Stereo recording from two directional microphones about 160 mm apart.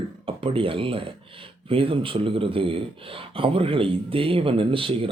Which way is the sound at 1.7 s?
35° right (ahead or behind).